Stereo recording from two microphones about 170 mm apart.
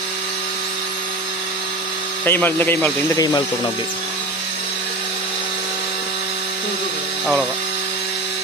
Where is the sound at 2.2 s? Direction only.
10° left (ahead or behind).